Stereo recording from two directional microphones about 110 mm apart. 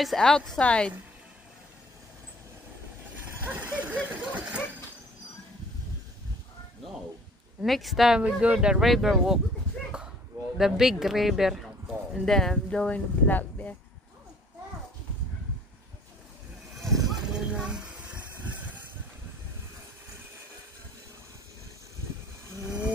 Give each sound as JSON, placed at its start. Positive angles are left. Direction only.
{"t": 0.0, "sound": "speech", "side_deg": 5}
{"t": 3.9, "sound": "a sound", "side_deg": -10}
{"t": 7.6, "sound": "speech", "side_deg": 0}
{"t": 10.6, "sound": "speech", "side_deg": -5}
{"t": 16.7, "sound": "a sound", "side_deg": 0}
{"t": 22.6, "sound": "wild animals", "side_deg": -30}